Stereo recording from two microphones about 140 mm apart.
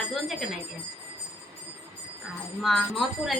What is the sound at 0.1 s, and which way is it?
Bell, centre (ahead or behind).